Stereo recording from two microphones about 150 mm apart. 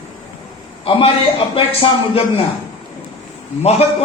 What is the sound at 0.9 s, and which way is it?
Speech, 35° left (ahead or behind).